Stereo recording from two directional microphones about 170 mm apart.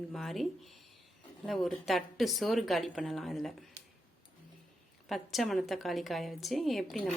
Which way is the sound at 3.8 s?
80° right.